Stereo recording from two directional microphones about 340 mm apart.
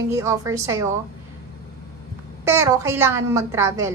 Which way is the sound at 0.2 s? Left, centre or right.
Centre.